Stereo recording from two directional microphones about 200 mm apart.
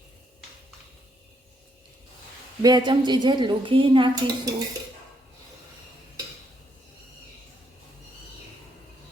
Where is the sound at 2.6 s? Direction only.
20° right (ahead or behind).